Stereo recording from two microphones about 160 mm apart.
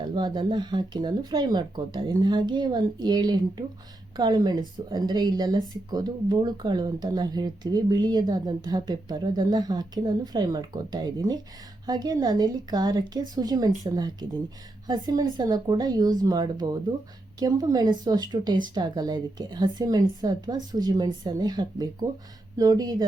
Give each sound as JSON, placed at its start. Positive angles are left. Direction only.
{"t": 0.0, "sound": "speech", "side_deg": -30}